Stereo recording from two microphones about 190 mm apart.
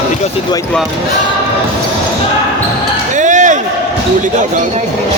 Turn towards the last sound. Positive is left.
turn(degrees=-40)  # may be behind; listen again after turning